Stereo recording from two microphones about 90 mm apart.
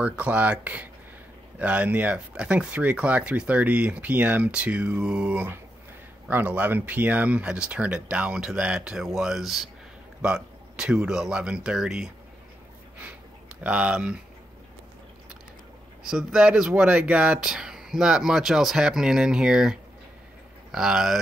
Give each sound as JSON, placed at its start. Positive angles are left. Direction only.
{"t": 0.0, "sound": "speech", "side_deg": -15}
{"t": 13.6, "sound": "speech", "side_deg": -15}
{"t": 16.1, "sound": "speech", "side_deg": -5}